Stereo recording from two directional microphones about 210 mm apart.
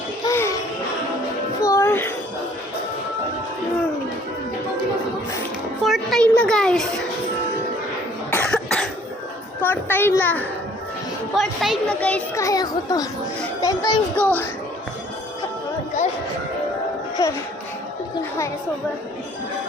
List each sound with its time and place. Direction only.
0.3 s music: 15° left (ahead or behind)
1.6 s music: 15° left (ahead or behind)
5.8 s a sound: centre (ahead or behind)
8.3 s cough: 5° left (ahead or behind)
9.6 s a child's voice: 10° left (ahead or behind)
14.2 s a child's voice: 10° left (ahead or behind)
17.2 s a child's voice: 15° left (ahead or behind)